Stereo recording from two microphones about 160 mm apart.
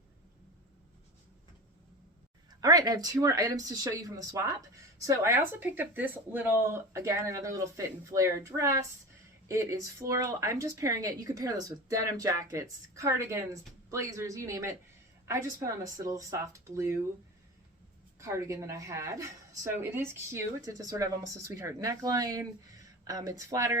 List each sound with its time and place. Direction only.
2.5 s speech: 25° right (ahead or behind)
18.2 s speech: 20° right (ahead or behind)